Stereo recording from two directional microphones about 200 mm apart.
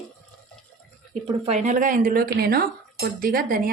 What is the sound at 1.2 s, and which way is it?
Speech, 30° right (ahead or behind).